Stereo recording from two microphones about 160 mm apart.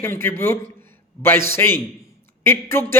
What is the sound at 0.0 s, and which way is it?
A man's voice, 15° left (ahead or behind).